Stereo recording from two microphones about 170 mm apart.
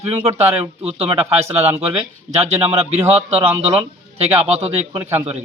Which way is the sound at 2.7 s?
35° right (ahead or behind).